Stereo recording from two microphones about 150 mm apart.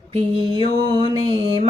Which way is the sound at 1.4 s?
35° right (ahead or behind).